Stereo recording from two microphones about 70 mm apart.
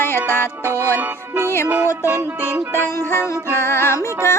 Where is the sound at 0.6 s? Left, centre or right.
Right.